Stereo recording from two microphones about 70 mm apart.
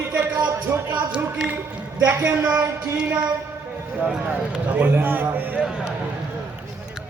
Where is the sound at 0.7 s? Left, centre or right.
Right.